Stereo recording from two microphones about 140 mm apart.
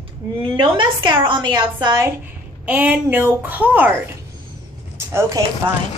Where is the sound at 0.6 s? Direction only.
35° right (ahead or behind).